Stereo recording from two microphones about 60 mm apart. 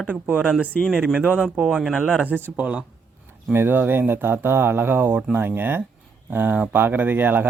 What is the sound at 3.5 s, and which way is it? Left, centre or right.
Speech, right.